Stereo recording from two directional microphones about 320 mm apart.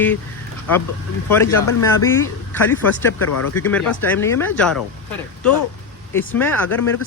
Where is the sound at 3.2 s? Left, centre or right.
Left.